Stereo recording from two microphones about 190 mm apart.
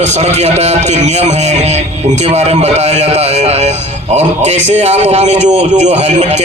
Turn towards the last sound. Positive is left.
turn(degrees=-35)  # may be behind; listen again after turning